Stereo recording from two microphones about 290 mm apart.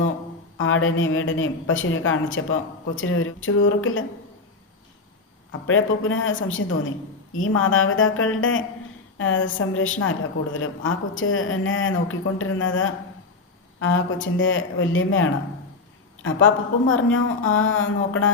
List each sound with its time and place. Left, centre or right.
0.6 s a woman's voice: left
5.5 s a woman's voice: left